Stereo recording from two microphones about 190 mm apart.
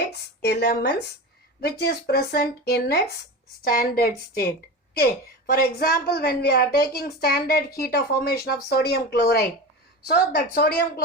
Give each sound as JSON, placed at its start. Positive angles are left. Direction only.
{"t": 0.1, "sound": "a woman's voice", "side_deg": 60}